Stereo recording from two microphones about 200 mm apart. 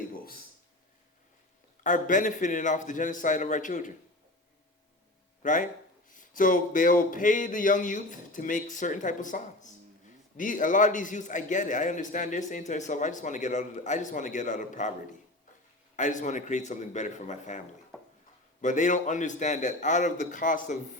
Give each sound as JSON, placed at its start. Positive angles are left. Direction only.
{"t": 1.8, "sound": "a man's voice", "side_deg": 40}
{"t": 5.4, "sound": "a man's voice", "side_deg": 40}
{"t": 16.0, "sound": "a man's voice", "side_deg": 40}
{"t": 18.6, "sound": "a man's voice", "side_deg": 40}